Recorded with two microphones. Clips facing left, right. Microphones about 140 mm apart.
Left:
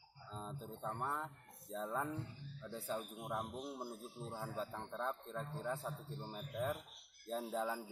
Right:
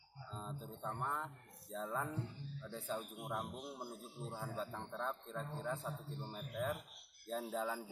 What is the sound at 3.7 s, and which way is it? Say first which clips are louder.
A man's voice: left 2 dB; centre (ahead or behind).